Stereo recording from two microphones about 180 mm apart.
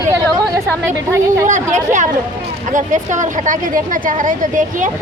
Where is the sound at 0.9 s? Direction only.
15° right (ahead or behind).